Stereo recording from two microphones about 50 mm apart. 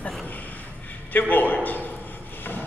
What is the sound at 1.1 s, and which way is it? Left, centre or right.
Speech, left.